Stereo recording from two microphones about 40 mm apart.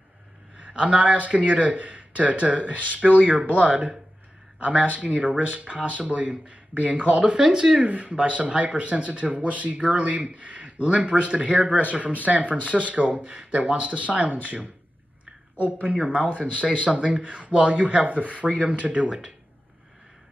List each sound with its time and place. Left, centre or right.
0.6 s speech: right
7.4 s speech: centre
7.8 s speech: right
15.8 s speech: right